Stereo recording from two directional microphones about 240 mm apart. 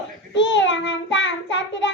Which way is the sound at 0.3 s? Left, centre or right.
Left.